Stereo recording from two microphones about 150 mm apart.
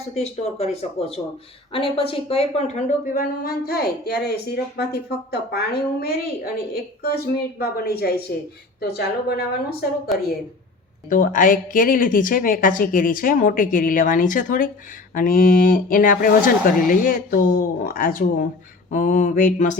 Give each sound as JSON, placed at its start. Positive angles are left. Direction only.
{"t": 0.1, "sound": "a woman's voice", "side_deg": 45}
{"t": 11.1, "sound": "speech", "side_deg": 60}
{"t": 18.9, "sound": "speech", "side_deg": 55}